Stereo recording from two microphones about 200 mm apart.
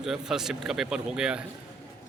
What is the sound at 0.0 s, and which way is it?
A man's voice, centre (ahead or behind).